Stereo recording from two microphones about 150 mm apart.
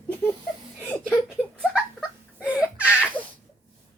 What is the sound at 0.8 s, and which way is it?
Chuckle, 15° left (ahead or behind).